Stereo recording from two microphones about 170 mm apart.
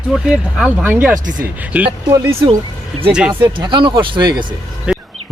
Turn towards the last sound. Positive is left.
turn(degrees=-5)  # may be behind; listen again after turning